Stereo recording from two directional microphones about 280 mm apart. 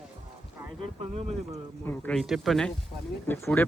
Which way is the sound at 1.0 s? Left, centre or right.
Right.